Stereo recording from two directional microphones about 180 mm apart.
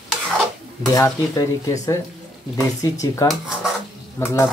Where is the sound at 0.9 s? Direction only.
20° left (ahead or behind).